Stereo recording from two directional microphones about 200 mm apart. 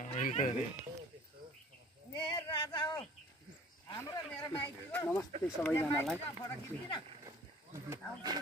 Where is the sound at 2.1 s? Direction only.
25° left (ahead or behind).